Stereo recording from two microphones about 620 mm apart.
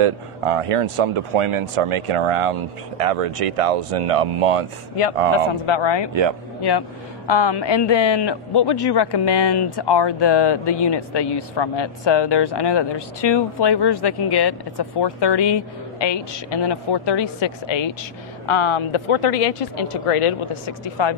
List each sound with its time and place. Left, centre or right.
0.0 s speech: right
5.7 s speech: left
7.2 s a man's voice: left